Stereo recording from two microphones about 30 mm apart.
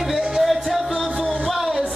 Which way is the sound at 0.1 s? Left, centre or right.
Centre.